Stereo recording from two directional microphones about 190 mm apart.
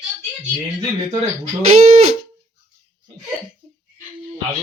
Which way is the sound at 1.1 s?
35° right (ahead or behind).